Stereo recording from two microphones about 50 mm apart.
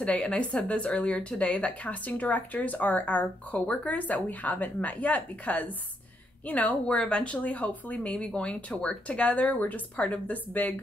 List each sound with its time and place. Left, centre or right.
0.0 s a woman's voice: left
9.9 s speech: centre
10.2 s a woman's voice: left